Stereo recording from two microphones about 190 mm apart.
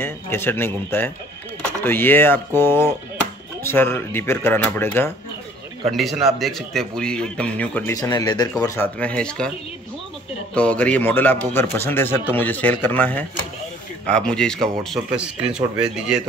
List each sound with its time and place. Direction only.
0.0 s a man's voice: 10° left (ahead or behind)
5.9 s speech: centre (ahead or behind)
7.9 s a man's voice: 20° left (ahead or behind)
10.5 s a man's voice: 5° left (ahead or behind)